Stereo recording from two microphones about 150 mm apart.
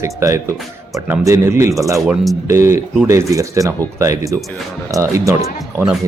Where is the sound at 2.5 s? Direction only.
20° right (ahead or behind).